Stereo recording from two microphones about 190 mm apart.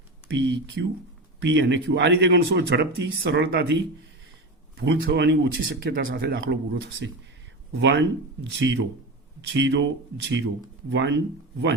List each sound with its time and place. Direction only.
0.3 s speech: 70° right (ahead or behind); by 6.6 s 55° right (ahead or behind)
7.7 s speech: 65° right (ahead or behind)